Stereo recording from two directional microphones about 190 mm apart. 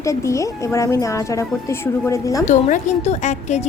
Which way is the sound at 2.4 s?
40° left (ahead or behind).